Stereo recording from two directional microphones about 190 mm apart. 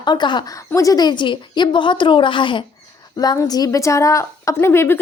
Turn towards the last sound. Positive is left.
turn(degrees=10)  # may be behind; listen again after turning